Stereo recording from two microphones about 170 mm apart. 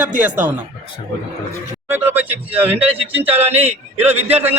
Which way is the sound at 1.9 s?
10° right (ahead or behind).